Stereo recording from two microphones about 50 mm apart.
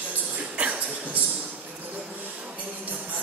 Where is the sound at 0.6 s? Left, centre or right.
Right.